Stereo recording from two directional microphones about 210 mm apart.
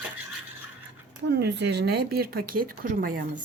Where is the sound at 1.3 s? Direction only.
50° right (ahead or behind).